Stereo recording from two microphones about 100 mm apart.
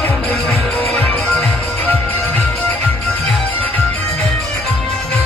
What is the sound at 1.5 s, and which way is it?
Music, 20° left (ahead or behind).